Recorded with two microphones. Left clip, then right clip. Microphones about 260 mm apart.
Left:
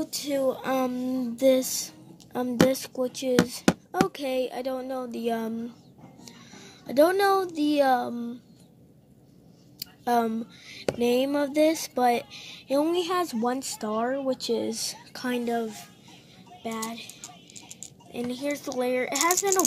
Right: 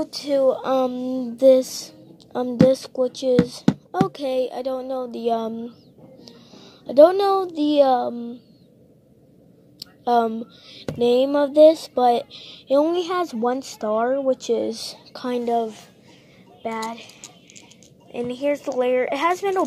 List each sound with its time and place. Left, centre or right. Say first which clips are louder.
0.0 s speech: right 7 dB; left
6.5 s a sound: right 8 dB; left
7.5 s speech: right 6 dB; left
10.0 s speech: right 6 dB; left
18.1 s speech: right 8 dB; centre